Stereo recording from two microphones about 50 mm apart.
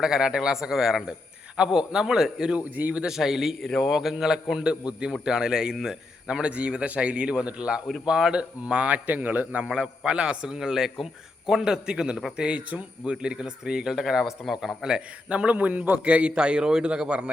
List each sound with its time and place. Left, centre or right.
0.0 s a man's voice: centre
2.6 s a man's voice: right
3.0 s a man's voice: centre
9.0 s a man's voice: right
9.6 s a man's voice: centre
12.4 s a man's voice: right
15.3 s a man's voice: right